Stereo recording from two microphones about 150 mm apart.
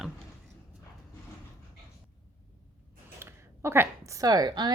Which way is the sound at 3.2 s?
15° right (ahead or behind).